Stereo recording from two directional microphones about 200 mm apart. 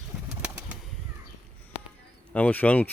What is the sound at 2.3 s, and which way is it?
Speech, 5° left (ahead or behind).